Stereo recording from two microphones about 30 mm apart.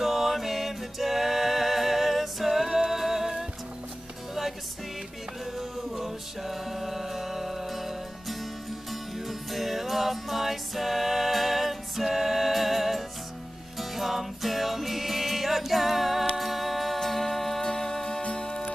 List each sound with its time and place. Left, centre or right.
0.0 s music: centre
5.6 s music: centre
16.3 s a capella: centre
17.0 s music: centre
17.6 s music: centre
18.2 s music: left